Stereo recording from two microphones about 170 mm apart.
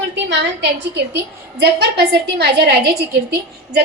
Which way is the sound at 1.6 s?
75° right (ahead or behind).